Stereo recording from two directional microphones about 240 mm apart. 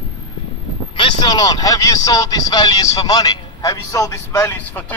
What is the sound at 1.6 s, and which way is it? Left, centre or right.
A man's voice, centre.